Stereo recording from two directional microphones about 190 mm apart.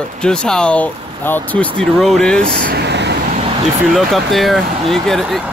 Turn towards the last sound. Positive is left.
turn(degrees=0)  # may be behind; listen again after turning